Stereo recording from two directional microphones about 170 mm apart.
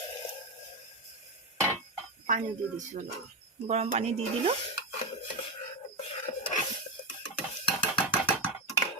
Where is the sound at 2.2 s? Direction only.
50° right (ahead or behind).